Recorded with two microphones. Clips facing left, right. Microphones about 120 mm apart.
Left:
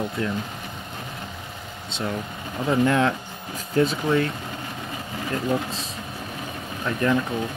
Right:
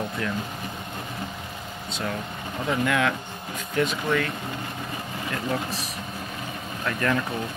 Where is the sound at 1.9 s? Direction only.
25° left (ahead or behind).